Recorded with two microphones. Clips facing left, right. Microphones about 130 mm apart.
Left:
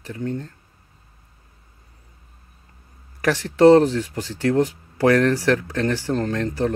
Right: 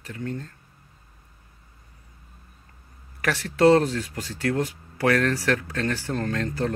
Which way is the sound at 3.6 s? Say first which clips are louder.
Left 5 dB; 20° left (ahead or behind).